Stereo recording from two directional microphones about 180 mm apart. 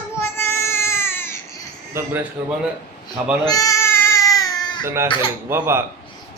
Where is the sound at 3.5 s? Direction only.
20° left (ahead or behind).